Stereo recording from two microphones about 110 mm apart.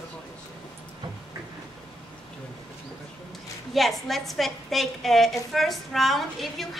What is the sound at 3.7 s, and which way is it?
A woman's voice, centre (ahead or behind).